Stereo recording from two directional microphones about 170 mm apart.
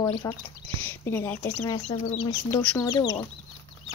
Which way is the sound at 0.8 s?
15° left (ahead or behind).